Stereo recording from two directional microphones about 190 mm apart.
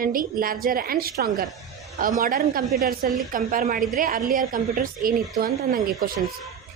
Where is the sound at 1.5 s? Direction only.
Centre (ahead or behind).